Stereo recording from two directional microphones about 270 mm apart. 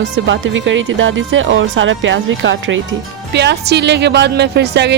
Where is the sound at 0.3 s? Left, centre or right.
Right.